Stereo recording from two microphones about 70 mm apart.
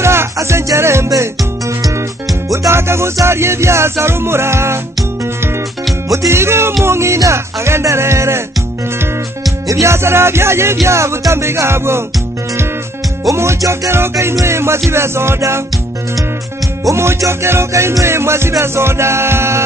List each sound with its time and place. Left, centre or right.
0.0 s music: right
2.5 s music: right
6.0 s music: right
9.7 s music: right
13.3 s music: right
16.9 s music: right